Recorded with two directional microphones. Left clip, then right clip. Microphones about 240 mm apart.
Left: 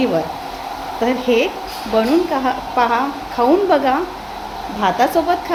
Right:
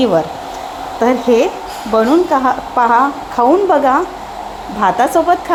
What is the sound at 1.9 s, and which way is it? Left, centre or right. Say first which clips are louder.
A woman's voice: right 5 dB; centre.